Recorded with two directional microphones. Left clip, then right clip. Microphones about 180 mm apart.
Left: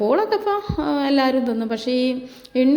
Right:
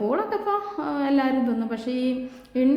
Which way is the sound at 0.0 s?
30° left (ahead or behind).